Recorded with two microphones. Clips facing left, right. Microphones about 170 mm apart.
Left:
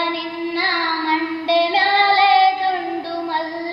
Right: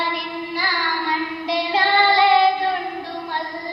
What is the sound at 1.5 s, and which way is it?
Child singing, 30° left (ahead or behind).